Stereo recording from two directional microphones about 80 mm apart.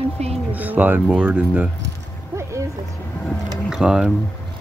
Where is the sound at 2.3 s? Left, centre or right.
Right.